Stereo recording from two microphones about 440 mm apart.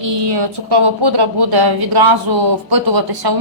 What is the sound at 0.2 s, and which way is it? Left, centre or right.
Speech, right.